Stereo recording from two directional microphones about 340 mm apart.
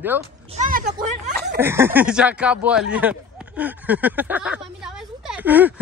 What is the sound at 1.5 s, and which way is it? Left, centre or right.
Speech, centre.